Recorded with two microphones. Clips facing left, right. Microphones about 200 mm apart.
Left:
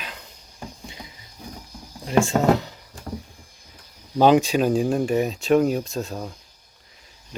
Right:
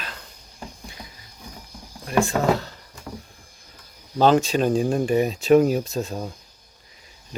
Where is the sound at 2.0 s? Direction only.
25° left (ahead or behind).